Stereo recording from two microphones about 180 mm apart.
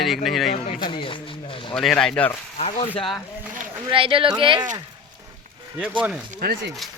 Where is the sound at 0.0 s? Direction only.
Centre (ahead or behind).